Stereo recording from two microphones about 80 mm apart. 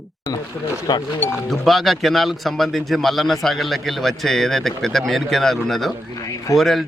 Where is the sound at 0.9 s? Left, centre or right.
Left.